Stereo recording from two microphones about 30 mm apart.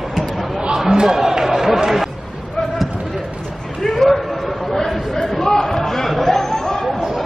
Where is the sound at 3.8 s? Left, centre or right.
Centre.